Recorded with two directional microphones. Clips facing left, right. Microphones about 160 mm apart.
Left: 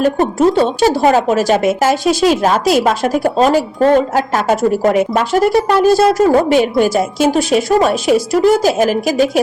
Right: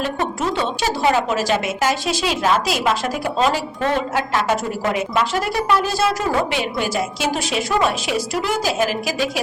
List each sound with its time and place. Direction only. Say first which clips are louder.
0.0 s speech: left 10 dB; 40° left (ahead or behind)